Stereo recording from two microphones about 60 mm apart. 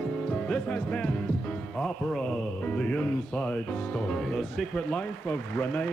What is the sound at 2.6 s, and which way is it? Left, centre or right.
Speech, left.